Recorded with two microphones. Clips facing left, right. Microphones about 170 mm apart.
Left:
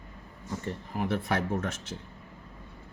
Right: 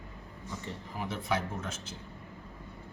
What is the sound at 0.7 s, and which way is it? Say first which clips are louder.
Speech: left 8 dB; 55° left (ahead or behind).